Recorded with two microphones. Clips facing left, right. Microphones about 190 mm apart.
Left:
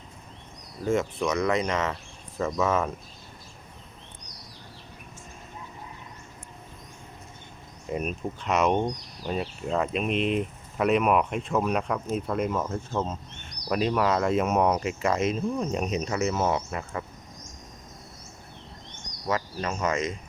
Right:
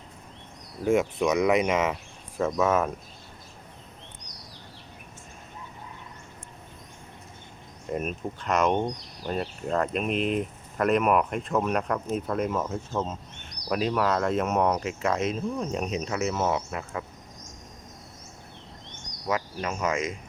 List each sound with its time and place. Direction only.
0.9 s cricket: 15° right (ahead or behind)
1.6 s cricket: 5° right (ahead or behind)
2.4 s speech: 5° right (ahead or behind)
7.9 s speech: centre (ahead or behind)
19.3 s cricket: 10° right (ahead or behind)